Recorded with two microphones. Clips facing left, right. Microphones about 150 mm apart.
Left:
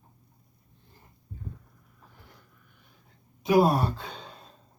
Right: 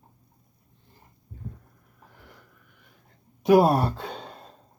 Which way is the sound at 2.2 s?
80° right.